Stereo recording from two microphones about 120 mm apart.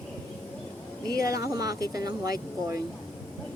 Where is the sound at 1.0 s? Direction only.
30° right (ahead or behind).